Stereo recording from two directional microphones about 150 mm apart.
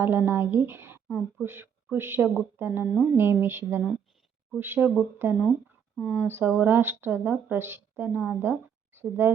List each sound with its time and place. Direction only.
0.0 s speech: 15° right (ahead or behind)
1.0 s speech: 5° right (ahead or behind)
1.5 s speech: 15° right (ahead or behind)
2.8 s speech: centre (ahead or behind)
3.2 s speech: 15° right (ahead or behind)